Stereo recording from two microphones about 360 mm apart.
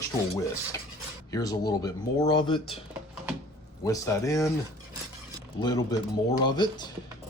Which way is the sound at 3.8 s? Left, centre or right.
Centre.